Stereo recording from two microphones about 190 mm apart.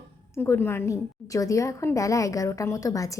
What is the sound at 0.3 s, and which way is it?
A woman's voice, 10° left (ahead or behind).